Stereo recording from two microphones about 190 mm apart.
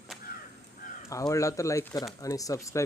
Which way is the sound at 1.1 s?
15° left (ahead or behind).